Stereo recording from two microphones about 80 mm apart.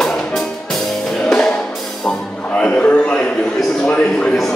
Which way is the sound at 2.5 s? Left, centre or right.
Centre.